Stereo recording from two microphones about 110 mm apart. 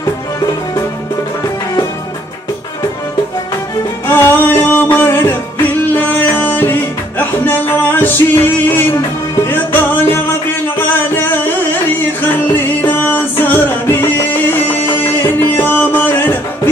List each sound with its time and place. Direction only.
4.1 s music: 20° left (ahead or behind)